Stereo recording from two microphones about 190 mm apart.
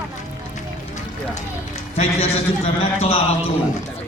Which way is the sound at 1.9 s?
35° left (ahead or behind).